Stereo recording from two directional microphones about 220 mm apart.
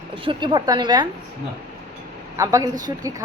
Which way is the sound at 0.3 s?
20° right (ahead or behind).